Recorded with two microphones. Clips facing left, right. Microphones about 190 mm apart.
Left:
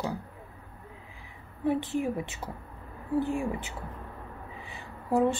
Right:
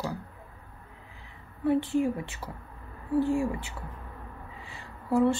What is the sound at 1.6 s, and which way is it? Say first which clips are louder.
A woman's voice: right 3 dB; 20° left (ahead or behind).